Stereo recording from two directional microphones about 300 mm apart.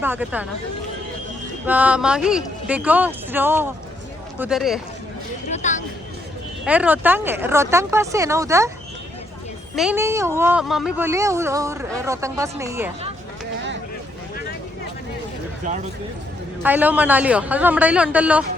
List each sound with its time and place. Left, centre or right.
0.0 s speech: centre
1.6 s speech: centre
5.5 s a sound: left
6.7 s speech: centre
9.7 s speech: centre
16.6 s speech: centre